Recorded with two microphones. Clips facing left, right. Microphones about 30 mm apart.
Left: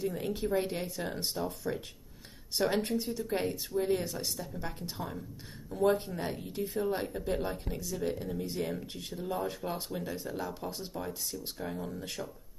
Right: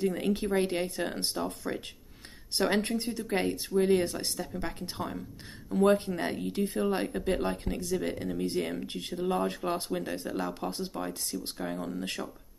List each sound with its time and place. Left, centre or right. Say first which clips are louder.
0.0 s speech: right 4 dB; right
3.4 s speech: right 5 dB; right
3.9 s speech: right 5 dB; right
8.5 s speech: right 3 dB; right
8.8 s speech: right 6 dB; right